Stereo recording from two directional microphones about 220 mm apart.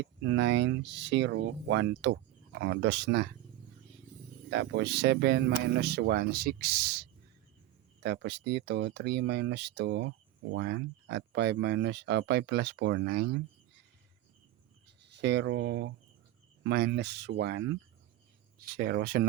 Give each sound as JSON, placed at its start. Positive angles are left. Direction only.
{"t": 0.0, "sound": "speech", "side_deg": -55}
{"t": 4.4, "sound": "speech", "side_deg": -55}
{"t": 15.0, "sound": "speech", "side_deg": -50}
{"t": 18.7, "sound": "speech", "side_deg": -45}